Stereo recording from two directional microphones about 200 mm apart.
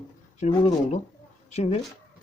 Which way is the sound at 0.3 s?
35° left (ahead or behind).